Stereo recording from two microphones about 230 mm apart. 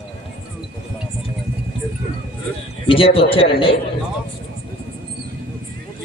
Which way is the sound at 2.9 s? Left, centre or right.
Left.